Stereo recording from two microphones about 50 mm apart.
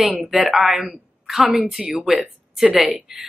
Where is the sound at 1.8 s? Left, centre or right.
Centre.